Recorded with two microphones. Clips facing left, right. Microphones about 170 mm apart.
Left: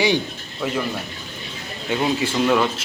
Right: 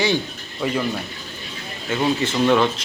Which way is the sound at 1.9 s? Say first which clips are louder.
Even; 10° left (ahead or behind).